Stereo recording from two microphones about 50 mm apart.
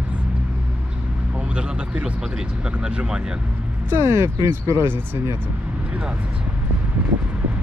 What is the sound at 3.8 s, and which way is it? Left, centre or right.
Speech, right.